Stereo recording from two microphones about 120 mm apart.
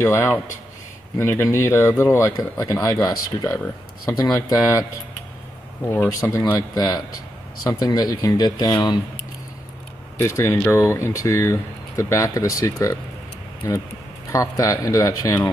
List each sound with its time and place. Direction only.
0.0 s speech: 20° left (ahead or behind)
5.9 s speech: 20° left (ahead or behind)
6.7 s speech: 35° left (ahead or behind)
10.1 s speech: 25° left (ahead or behind)